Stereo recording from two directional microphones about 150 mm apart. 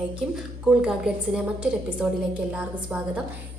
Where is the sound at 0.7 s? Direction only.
5° right (ahead or behind).